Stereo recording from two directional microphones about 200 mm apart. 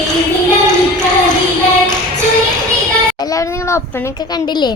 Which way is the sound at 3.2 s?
15° left (ahead or behind).